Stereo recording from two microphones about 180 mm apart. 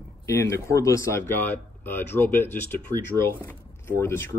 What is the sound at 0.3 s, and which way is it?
Speech, 15° left (ahead or behind).